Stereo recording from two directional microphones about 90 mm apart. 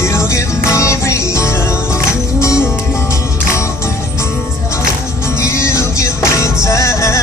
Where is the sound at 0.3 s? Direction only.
35° left (ahead or behind).